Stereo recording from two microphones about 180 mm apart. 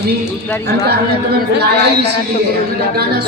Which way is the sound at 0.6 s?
65° right (ahead or behind).